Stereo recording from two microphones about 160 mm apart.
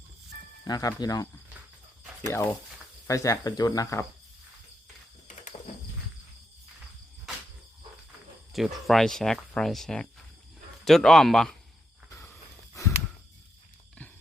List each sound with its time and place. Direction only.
0.6 s speech: 25° left (ahead or behind)
8.5 s speech: centre (ahead or behind)
12.1 s a sound: 15° left (ahead or behind)